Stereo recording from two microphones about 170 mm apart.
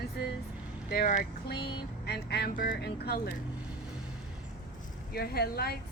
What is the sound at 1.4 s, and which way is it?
Speech, 70° left (ahead or behind).